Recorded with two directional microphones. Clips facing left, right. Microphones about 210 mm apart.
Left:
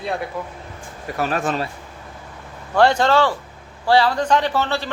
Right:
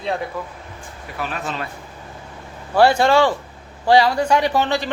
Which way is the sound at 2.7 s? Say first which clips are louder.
Right 1 dB; 10° right (ahead or behind).